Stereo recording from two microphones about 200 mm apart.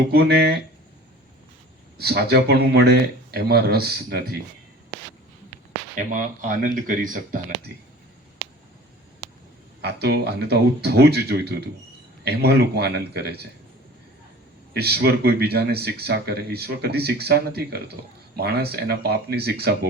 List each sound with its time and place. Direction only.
0.1 s speech: 55° right (ahead or behind)
2.0 s speech: 50° right (ahead or behind)
6.0 s speech: 40° right (ahead or behind)
9.8 s a man's voice: 55° right (ahead or behind)
14.7 s speech: 50° right (ahead or behind)